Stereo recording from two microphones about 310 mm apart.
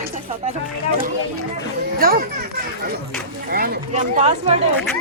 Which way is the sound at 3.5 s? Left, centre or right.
Right.